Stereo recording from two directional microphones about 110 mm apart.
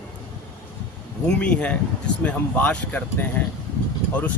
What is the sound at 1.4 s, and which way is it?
Speech, 10° left (ahead or behind).